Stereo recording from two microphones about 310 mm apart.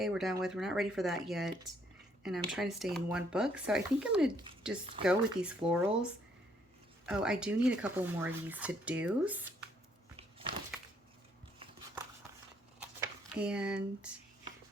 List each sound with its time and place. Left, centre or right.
0.0 s speech: centre
10.2 s a sound: centre
13.0 s speech: centre